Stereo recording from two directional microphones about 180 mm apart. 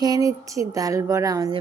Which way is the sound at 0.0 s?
20° right (ahead or behind).